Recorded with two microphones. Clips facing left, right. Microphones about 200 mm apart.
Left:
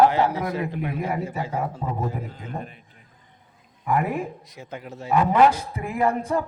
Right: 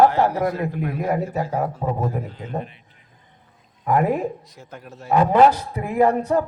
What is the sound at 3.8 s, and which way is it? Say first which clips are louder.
A man's voice: right 4 dB; 40° right (ahead or behind).